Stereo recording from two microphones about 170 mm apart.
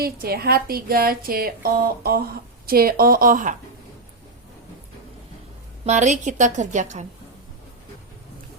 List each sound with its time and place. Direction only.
0.0 s speech: 65° right (ahead or behind)
5.8 s a woman's voice: 40° right (ahead or behind)